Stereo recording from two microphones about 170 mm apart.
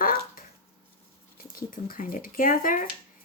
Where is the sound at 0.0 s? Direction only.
55° left (ahead or behind).